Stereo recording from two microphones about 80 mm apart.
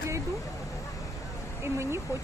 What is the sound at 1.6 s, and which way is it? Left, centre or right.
Speech, right.